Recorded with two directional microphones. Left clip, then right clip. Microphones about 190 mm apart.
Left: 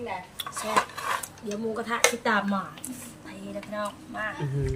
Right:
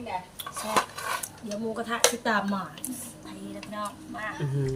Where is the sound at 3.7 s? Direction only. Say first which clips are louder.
Left 2 dB; 10° left (ahead or behind).